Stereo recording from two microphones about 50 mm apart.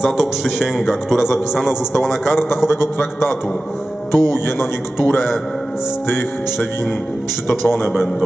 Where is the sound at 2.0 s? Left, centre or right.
Centre.